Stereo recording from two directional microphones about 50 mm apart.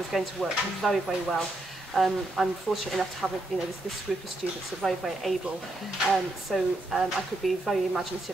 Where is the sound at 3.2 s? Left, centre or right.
Centre.